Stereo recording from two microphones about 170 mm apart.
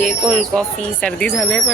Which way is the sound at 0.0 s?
Centre (ahead or behind).